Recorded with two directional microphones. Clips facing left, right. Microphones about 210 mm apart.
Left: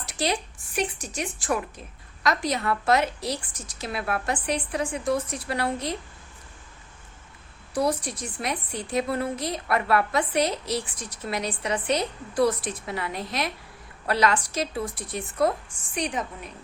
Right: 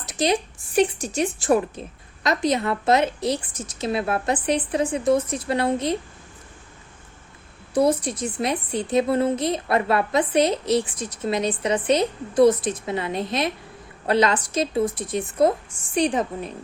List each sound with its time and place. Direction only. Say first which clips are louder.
0.0 s a sound: right 5 dB; 20° right (ahead or behind)
0.8 s a woman's voice: right 9 dB; 30° right (ahead or behind)
7.7 s a woman's voice: right 6 dB; 25° right (ahead or behind)